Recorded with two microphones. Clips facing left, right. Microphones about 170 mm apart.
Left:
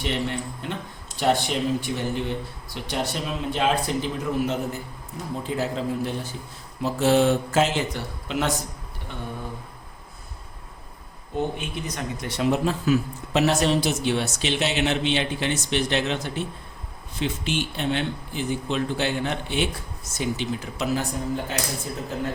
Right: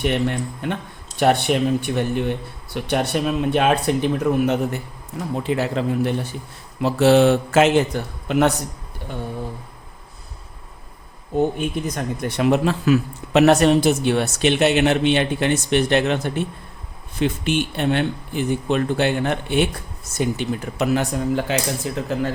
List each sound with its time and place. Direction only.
0.0 s speech: 55° right (ahead or behind)
5.4 s mantra: 70° right (ahead or behind)
6.8 s mantra: 75° right (ahead or behind)
7.9 s speech: 55° right (ahead or behind)
11.3 s speech: 50° right (ahead or behind); by 21.6 s 80° right
21.9 s speech: 90° right